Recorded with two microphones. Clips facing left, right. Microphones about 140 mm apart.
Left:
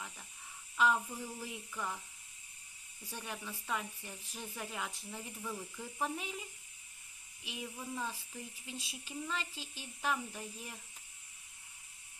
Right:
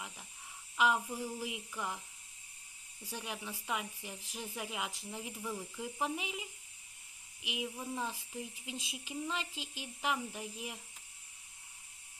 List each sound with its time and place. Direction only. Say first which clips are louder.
0.8 s speech: even; 10° right (ahead or behind)
3.0 s speech: right 2 dB; 10° right (ahead or behind)